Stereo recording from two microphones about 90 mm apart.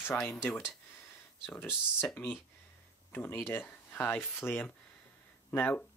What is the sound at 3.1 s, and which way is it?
Speech, 25° left (ahead or behind).